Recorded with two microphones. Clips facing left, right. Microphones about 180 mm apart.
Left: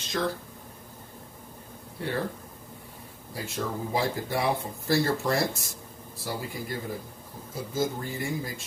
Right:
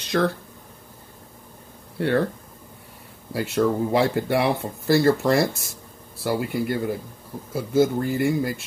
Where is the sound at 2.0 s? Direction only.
70° right (ahead or behind).